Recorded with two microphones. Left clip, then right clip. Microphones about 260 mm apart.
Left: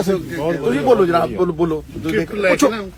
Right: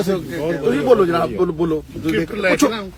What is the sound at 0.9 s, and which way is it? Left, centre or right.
Speech, centre.